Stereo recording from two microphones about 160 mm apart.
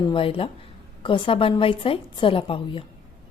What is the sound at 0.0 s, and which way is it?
A woman's voice, 35° left (ahead or behind).